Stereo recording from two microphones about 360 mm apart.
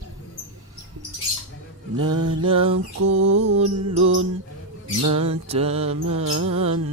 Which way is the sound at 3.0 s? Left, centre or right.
Right.